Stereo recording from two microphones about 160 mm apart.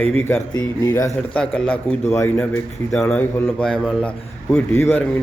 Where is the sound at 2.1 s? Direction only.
20° left (ahead or behind).